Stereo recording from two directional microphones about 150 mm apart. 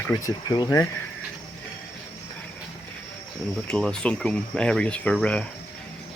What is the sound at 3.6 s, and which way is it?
Speech, 5° left (ahead or behind).